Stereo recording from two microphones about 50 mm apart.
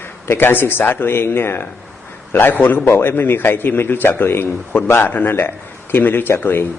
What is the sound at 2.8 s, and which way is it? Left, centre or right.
A man's voice, left.